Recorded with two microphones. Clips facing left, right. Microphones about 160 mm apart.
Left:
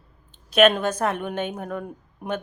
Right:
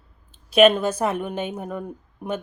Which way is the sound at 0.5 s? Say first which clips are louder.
Right 2 dB; 10° right (ahead or behind).